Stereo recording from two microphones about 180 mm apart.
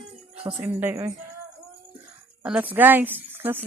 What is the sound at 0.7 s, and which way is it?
Speech, 10° right (ahead or behind).